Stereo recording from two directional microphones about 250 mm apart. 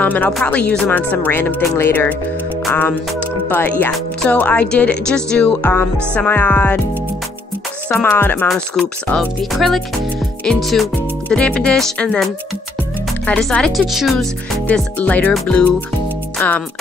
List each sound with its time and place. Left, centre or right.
0.0 s speech: centre
7.9 s speech: centre